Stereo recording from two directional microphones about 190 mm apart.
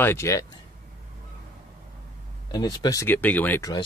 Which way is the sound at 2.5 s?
20° left (ahead or behind).